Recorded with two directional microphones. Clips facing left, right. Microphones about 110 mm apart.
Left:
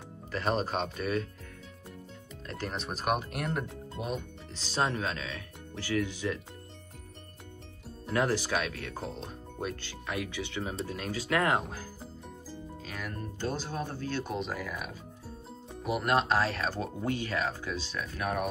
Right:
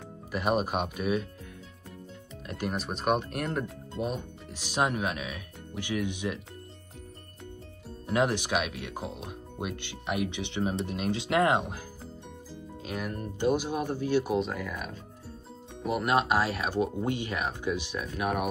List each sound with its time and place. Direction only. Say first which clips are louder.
0.3 s speech: right 3 dB; 10° right (ahead or behind)
2.4 s speech: right 4 dB; 15° right (ahead or behind)
2.8 s speech: right 2 dB; centre (ahead or behind)
4.6 s speech: right 2 dB; 15° right (ahead or behind)
8.1 s speech: right 2 dB; 20° right (ahead or behind)
12.8 s speech: right 6 dB; 20° right (ahead or behind)
14.3 s speech: right 5 dB; centre (ahead or behind)